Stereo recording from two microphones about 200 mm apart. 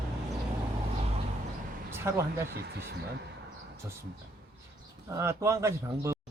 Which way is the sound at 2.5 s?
55° right (ahead or behind).